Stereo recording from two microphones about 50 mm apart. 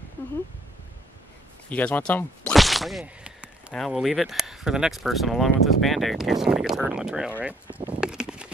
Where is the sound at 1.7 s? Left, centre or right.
Left.